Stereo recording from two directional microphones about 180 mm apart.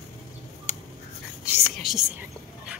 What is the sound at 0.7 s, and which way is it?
Writing, 40° left (ahead or behind).